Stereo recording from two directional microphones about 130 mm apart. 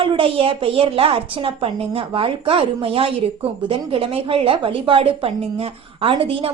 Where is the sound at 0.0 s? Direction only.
45° right (ahead or behind).